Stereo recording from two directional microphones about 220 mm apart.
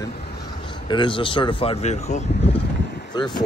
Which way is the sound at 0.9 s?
20° left (ahead or behind).